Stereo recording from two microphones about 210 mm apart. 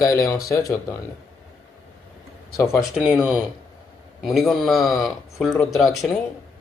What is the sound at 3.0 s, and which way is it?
Speech, 5° right (ahead or behind).